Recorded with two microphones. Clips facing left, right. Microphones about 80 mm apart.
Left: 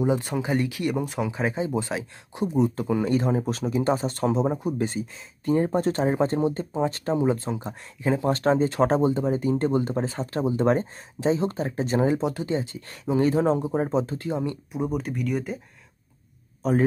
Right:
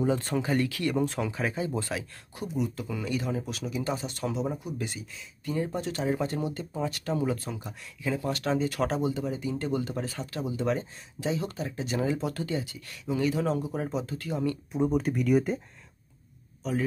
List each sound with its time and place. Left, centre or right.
0.0 s speech: centre
1.3 s speech: left
14.7 s speech: centre
16.6 s speech: left